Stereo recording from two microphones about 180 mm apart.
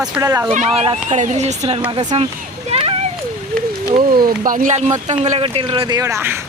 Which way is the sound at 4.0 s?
55° right (ahead or behind).